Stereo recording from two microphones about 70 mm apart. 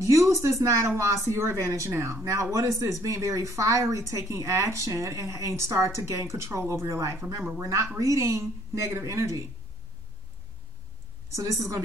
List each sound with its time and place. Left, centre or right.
0.0 s speech: right
11.3 s speech: right